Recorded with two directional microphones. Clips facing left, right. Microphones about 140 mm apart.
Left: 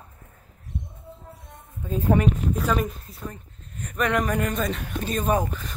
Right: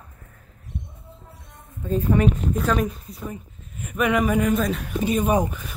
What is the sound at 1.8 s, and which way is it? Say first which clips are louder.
Speech: right 1 dB; 10° left (ahead or behind).